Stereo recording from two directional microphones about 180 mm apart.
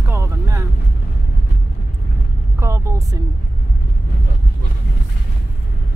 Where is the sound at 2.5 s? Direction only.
15° right (ahead or behind).